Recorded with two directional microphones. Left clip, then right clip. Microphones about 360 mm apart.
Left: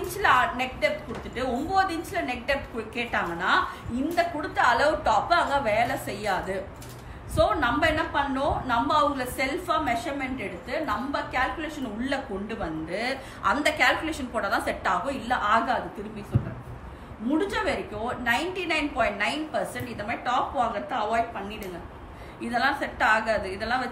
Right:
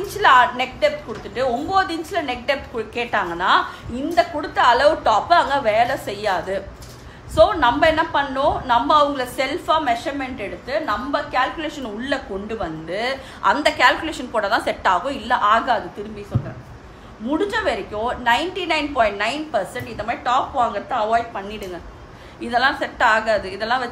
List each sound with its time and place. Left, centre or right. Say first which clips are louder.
0.2 s a woman's voice: right 8 dB; centre
7.3 s a woman's voice: right 8 dB; centre
17.5 s a woman's voice: right 6 dB; centre
22.5 s a woman's voice: right 7 dB; centre